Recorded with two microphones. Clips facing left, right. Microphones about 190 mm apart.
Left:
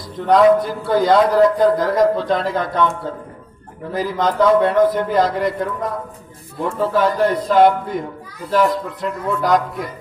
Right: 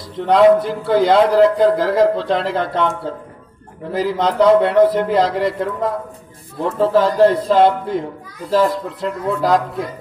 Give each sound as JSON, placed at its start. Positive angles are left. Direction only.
{"t": 0.3, "sound": "a man's voice", "side_deg": -25}
{"t": 3.9, "sound": "a man's voice", "side_deg": -25}